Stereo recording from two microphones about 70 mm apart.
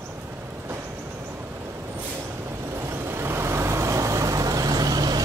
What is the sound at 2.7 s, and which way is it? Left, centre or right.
Vehicle, right.